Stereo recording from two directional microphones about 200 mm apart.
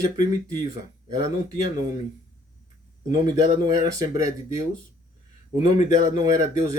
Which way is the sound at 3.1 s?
20° right (ahead or behind).